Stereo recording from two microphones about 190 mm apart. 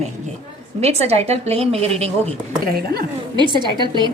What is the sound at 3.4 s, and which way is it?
Speech, 25° right (ahead or behind).